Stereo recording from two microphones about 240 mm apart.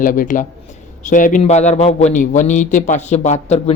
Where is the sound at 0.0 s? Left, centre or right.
Left.